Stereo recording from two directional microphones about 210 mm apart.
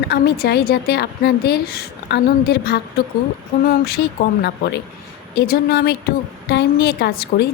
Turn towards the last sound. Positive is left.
turn(degrees=50)  # may be behind; listen again after turning